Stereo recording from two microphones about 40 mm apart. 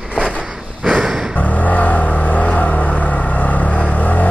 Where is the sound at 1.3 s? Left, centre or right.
Left.